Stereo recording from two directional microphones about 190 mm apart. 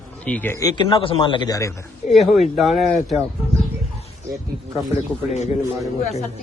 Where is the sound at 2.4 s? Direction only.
Centre (ahead or behind).